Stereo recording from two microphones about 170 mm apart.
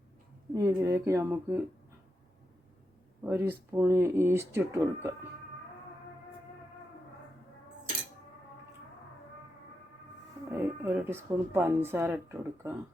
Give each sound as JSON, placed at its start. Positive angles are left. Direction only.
{"t": 0.5, "sound": "speech", "side_deg": -20}
{"t": 3.2, "sound": "speech", "side_deg": -10}
{"t": 10.5, "sound": "speech", "side_deg": -15}